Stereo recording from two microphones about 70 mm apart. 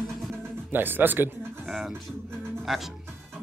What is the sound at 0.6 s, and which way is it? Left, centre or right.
Speech, right.